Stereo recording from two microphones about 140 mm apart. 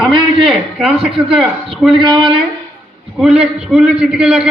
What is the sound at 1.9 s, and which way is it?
Speech, 35° right (ahead or behind).